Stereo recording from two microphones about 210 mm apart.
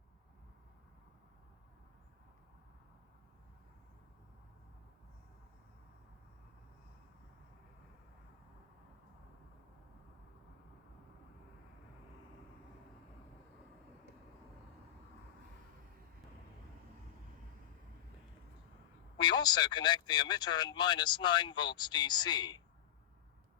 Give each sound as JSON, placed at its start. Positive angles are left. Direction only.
{"t": 19.2, "sound": "speech", "side_deg": 20}